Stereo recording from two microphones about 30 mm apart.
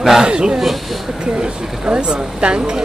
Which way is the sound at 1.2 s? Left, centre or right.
Right.